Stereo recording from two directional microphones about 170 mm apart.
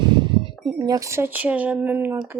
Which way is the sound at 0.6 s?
25° right (ahead or behind).